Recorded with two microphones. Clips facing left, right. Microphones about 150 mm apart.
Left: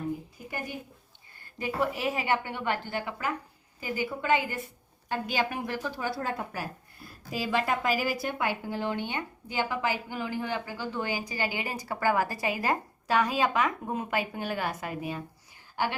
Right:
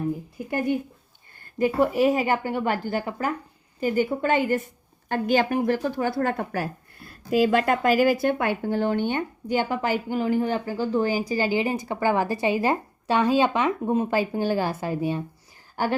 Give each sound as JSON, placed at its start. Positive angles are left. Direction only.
{"t": 1.5, "sound": "a woman's voice", "side_deg": -45}
{"t": 3.8, "sound": "a woman's voice", "side_deg": -50}
{"t": 15.7, "sound": "a woman's voice", "side_deg": -45}